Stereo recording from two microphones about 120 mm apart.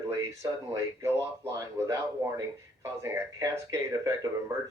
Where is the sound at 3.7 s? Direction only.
25° right (ahead or behind).